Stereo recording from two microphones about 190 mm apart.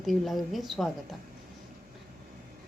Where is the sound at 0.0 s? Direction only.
Centre (ahead or behind).